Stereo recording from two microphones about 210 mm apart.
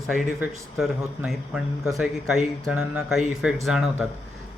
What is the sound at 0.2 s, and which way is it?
Speech, 5° right (ahead or behind).